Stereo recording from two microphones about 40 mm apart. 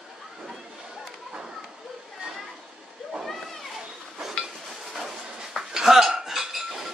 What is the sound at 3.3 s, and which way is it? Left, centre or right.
Children playing, centre.